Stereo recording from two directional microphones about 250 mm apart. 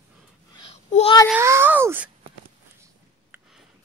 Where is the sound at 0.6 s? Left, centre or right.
Left.